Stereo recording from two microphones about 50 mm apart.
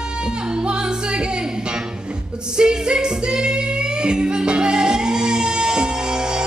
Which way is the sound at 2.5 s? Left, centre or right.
Centre.